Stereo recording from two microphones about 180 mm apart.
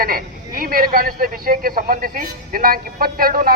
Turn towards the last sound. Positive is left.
turn(degrees=-55)  # may be behind; listen again after turning